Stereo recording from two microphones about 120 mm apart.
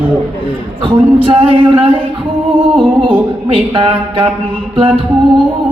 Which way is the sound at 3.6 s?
50° right (ahead or behind).